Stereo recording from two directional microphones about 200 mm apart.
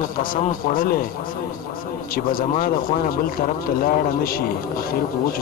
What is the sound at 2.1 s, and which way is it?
A man's voice, 45° left (ahead or behind).